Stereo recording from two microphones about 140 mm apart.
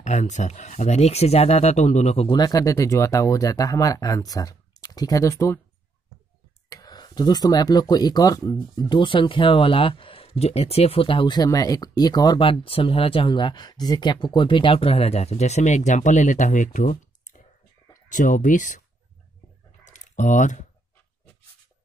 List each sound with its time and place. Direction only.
0.0 s speech: 60° left (ahead or behind)
2.3 s speech: 25° left (ahead or behind)
6.7 s speech: 25° left (ahead or behind); by 18.8 s 65° left (ahead or behind)
19.8 s typing: 60° left (ahead or behind)